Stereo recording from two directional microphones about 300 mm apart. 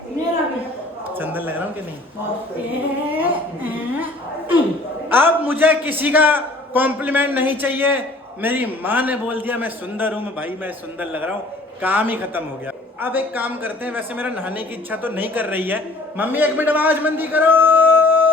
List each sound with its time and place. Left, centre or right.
1.2 s speech: centre
3.1 s a sound: centre
5.0 s a man's voice: centre